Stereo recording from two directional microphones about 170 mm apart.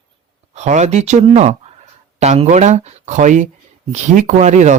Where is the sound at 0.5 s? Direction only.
45° right (ahead or behind).